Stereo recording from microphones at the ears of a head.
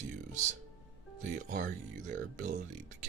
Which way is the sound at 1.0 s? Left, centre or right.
Right.